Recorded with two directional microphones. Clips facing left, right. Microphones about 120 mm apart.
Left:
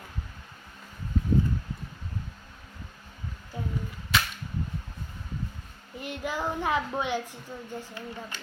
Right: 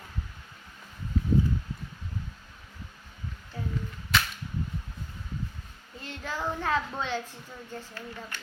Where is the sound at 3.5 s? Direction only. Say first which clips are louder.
Left 1 dB; 20° left (ahead or behind).